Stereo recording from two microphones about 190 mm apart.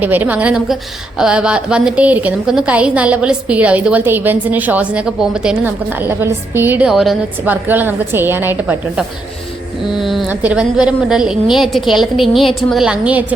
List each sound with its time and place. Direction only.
0.0 s a woman's voice: 10° right (ahead or behind)